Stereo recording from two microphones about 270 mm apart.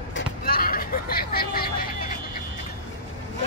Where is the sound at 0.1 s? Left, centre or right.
Left.